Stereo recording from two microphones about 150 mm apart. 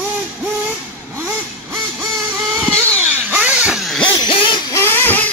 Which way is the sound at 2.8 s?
10° right (ahead or behind).